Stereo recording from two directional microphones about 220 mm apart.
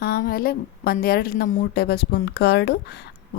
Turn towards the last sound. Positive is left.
turn(degrees=50)  # may be behind; listen again after turning